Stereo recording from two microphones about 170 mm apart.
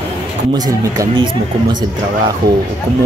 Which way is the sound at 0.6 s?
25° right (ahead or behind).